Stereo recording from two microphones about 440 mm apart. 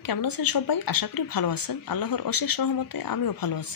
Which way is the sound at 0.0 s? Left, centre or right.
Left.